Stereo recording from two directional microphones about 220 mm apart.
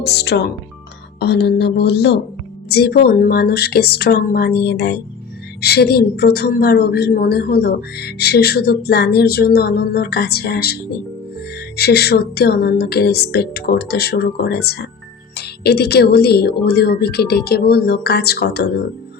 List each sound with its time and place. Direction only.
0.0 s speech: 50° left (ahead or behind)
11.8 s speech: 45° left (ahead or behind)